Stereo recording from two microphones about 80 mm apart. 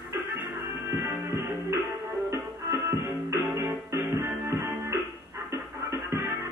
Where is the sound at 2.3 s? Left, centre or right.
Right.